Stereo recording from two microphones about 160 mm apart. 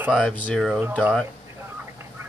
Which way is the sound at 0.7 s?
10° right (ahead or behind).